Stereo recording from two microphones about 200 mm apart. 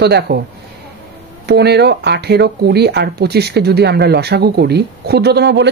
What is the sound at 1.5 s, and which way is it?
Speech, 55° right (ahead or behind).